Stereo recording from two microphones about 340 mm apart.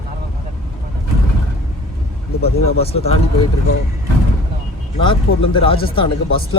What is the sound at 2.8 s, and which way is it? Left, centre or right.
Speech, centre.